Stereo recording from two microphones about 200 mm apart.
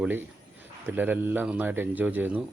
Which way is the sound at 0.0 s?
10° right (ahead or behind).